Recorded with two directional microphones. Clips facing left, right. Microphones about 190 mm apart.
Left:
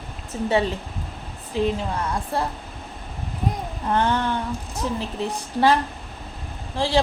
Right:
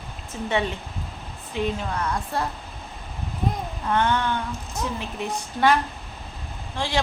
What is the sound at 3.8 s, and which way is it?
Speech, 35° left (ahead or behind).